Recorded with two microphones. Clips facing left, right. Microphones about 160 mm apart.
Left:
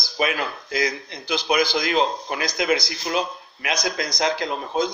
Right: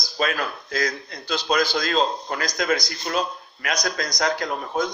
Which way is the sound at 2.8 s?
90° left.